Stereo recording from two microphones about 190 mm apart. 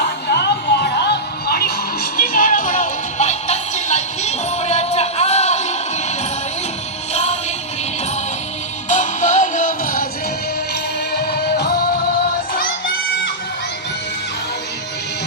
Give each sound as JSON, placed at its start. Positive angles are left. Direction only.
{"t": 0.0, "sound": "music", "side_deg": 60}
{"t": 7.1, "sound": "music", "side_deg": 35}
{"t": 8.9, "sound": "music", "side_deg": 40}
{"t": 11.1, "sound": "music", "side_deg": 55}